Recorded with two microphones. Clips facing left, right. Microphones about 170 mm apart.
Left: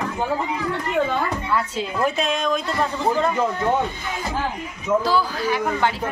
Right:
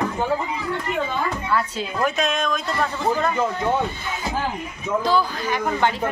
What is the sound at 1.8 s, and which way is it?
Speech, 30° left (ahead or behind).